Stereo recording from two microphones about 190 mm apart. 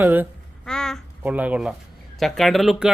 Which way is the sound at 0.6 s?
5° left (ahead or behind).